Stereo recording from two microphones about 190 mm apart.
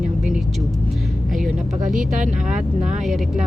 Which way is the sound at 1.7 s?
45° right (ahead or behind).